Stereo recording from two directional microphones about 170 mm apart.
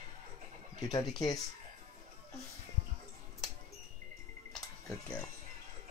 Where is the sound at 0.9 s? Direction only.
25° left (ahead or behind).